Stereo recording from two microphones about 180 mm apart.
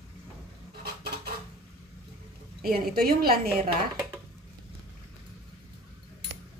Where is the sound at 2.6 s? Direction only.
55° right (ahead or behind).